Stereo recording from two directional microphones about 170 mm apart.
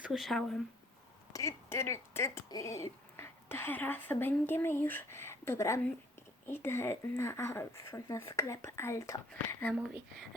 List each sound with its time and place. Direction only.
0.0 s speech: centre (ahead or behind)
1.3 s speech: 20° left (ahead or behind)
9.7 s speech: centre (ahead or behind)